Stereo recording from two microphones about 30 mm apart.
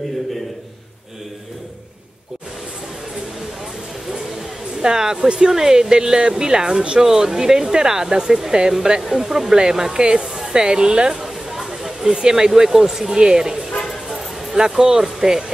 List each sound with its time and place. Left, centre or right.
4.8 s speech: right
9.0 s speech: centre; by 11.2 s right
11.2 s chatter: centre
12.1 s speech: right